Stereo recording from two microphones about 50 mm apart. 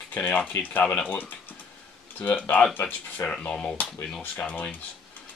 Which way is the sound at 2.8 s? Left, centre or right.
Left.